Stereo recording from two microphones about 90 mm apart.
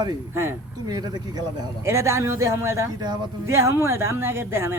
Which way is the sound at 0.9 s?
50° right (ahead or behind).